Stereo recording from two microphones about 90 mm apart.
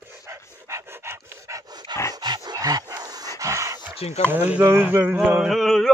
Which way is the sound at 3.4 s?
35° right (ahead or behind).